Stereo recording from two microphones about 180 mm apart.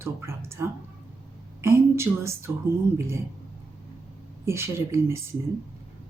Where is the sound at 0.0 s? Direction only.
15° right (ahead or behind).